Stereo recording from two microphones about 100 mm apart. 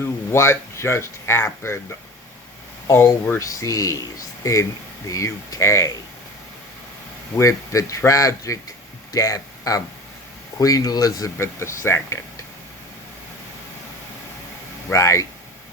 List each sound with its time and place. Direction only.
0.0 s speech: 25° left (ahead or behind)
2.8 s speech: 25° left (ahead or behind)
5.0 s speech: 35° left (ahead or behind)
7.3 s speech: 30° left (ahead or behind)
14.9 s speech: 30° left (ahead or behind)